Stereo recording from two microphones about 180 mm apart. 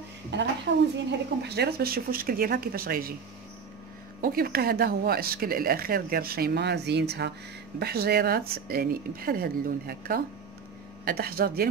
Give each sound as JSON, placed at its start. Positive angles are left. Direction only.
{"t": 0.3, "sound": "a woman's voice", "side_deg": -75}
{"t": 1.4, "sound": "speech", "side_deg": -65}
{"t": 4.2, "sound": "speech", "side_deg": -55}